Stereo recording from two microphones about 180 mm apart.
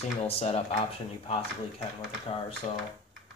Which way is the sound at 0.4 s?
35° left (ahead or behind).